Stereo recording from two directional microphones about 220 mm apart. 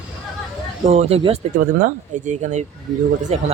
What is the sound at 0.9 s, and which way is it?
Speech, 30° right (ahead or behind).